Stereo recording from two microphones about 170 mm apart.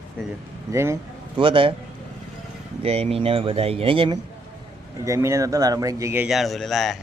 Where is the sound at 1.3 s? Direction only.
30° right (ahead or behind).